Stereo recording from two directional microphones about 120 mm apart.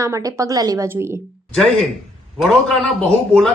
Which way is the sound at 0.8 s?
20° right (ahead or behind).